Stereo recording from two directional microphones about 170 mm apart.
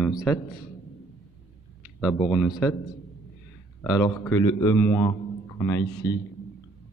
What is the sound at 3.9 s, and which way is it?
Speech, 15° left (ahead or behind).